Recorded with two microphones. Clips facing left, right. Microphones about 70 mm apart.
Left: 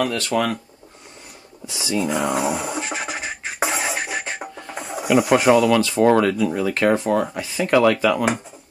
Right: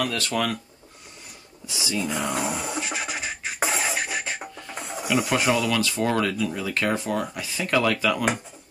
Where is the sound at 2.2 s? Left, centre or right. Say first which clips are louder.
Left 5 dB; centre.